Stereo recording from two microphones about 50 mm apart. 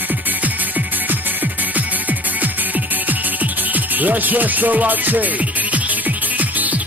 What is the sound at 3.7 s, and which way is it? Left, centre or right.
Music, right.